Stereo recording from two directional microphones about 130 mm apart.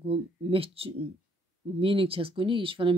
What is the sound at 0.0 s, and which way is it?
Speech, 45° right (ahead or behind).